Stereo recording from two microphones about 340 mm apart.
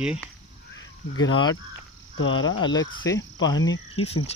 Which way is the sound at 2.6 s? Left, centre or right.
Centre.